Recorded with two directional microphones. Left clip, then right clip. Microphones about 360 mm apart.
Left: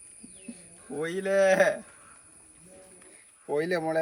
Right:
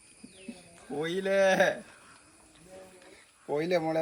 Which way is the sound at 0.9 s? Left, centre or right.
Centre.